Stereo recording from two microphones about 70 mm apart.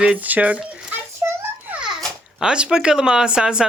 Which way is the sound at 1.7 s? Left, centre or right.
Centre.